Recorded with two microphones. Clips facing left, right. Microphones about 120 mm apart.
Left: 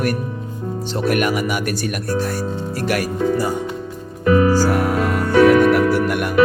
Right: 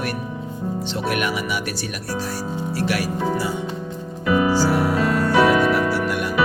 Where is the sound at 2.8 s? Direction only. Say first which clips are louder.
Left 3 dB; 45° left (ahead or behind).